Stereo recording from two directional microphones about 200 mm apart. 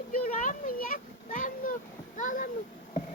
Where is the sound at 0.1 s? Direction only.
40° left (ahead or behind).